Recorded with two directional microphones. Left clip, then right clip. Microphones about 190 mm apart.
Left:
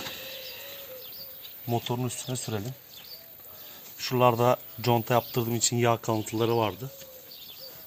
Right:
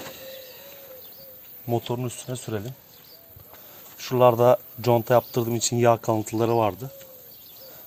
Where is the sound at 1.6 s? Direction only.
50° right (ahead or behind).